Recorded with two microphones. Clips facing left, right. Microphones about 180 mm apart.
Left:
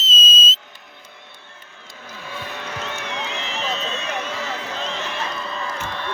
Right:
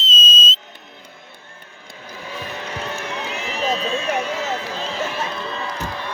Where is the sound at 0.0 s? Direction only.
5° left (ahead or behind).